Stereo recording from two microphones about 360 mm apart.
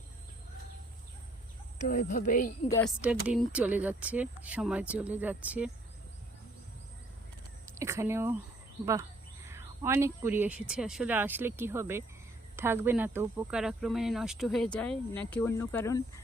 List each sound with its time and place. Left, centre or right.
1.9 s speech: left
2.6 s speech: centre
3.0 s speech: centre
7.8 s speech: centre
9.5 s speech: centre